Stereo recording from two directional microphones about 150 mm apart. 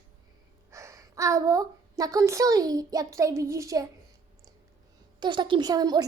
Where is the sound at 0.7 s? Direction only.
20° right (ahead or behind).